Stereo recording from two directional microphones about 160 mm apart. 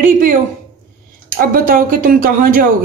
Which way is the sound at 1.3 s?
60° right (ahead or behind).